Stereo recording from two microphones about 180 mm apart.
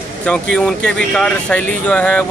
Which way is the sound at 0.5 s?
5° left (ahead or behind).